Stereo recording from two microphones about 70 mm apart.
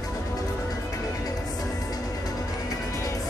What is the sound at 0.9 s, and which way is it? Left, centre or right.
Music, left.